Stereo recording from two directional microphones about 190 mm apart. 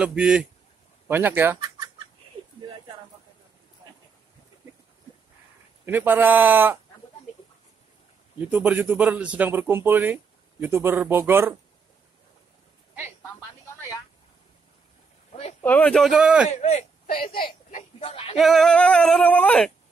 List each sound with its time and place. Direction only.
0.0 s male singing: 5° right (ahead or behind)
1.0 s a man's voice: 10° right (ahead or behind)
5.9 s a man's voice: 10° right (ahead or behind)
8.4 s a man's voice: 5° right (ahead or behind)
15.6 s male singing: 5° left (ahead or behind)
16.4 s speech: 40° left (ahead or behind)
17.6 s a sound: 35° left (ahead or behind)
18.4 s male singing: centre (ahead or behind)